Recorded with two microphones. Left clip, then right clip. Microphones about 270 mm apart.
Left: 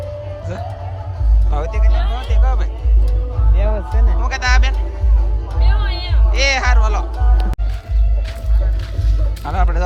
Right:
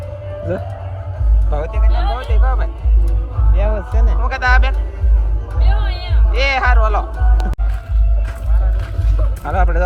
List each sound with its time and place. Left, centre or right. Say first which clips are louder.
1.5 s speech: right 1 dB; centre
3.5 s speech: right 2 dB; right
4.2 s speech: right 3 dB; centre
9.4 s speech: right 3 dB; centre